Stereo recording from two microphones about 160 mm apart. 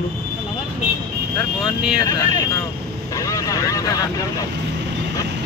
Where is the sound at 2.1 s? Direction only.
20° left (ahead or behind).